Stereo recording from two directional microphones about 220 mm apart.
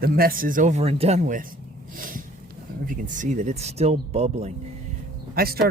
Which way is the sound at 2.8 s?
40° right (ahead or behind).